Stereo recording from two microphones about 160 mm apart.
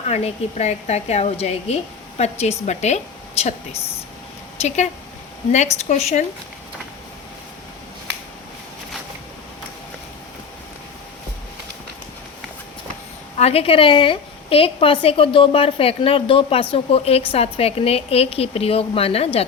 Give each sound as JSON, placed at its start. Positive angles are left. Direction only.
{"t": 0.1, "sound": "a woman's voice", "side_deg": 40}
{"t": 5.5, "sound": "a woman's voice", "side_deg": 45}
{"t": 13.4, "sound": "a woman's voice", "side_deg": 40}